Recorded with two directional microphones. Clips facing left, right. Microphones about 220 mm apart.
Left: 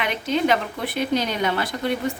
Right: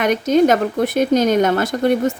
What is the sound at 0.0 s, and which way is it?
Speech, 45° right (ahead or behind).